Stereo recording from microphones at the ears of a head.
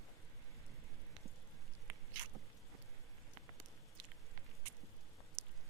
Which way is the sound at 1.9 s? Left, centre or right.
Right.